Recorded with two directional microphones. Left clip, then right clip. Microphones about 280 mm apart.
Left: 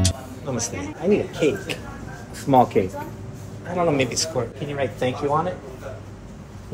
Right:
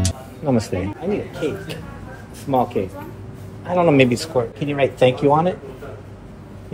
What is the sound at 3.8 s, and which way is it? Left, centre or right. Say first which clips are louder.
Speech: right 5 dB; right.